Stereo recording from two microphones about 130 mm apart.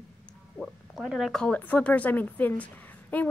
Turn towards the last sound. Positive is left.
turn(degrees=10)  # may be behind; listen again after turning